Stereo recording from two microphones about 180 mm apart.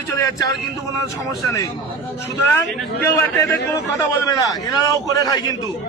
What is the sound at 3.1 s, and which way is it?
A man's voice, 15° left (ahead or behind).